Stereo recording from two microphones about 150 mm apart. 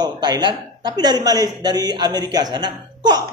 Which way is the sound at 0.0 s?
30° right (ahead or behind).